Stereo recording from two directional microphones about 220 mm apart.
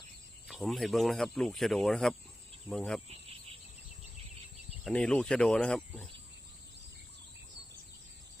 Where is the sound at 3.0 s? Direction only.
25° right (ahead or behind).